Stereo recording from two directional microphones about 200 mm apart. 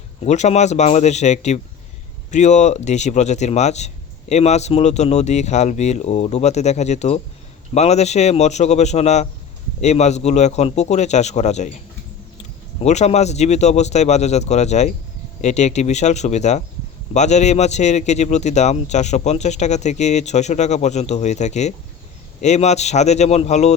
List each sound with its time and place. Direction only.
0.3 s a man's voice: 35° left (ahead or behind)